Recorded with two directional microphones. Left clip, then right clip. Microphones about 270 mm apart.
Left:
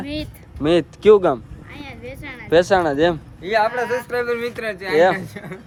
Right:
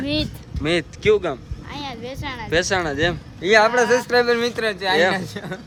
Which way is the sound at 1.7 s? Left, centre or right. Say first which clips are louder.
Right 4 dB; centre.